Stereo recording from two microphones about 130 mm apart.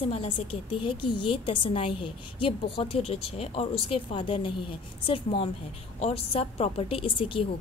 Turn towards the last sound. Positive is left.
turn(degrees=40)  # may be behind; listen again after turning